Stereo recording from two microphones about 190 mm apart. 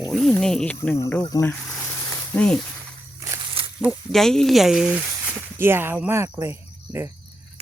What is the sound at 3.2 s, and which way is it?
Walk, 15° right (ahead or behind).